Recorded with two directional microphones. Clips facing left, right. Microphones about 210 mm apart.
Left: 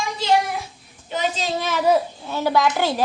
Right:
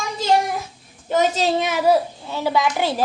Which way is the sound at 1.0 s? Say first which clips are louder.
Right 6 dB; 45° right (ahead or behind).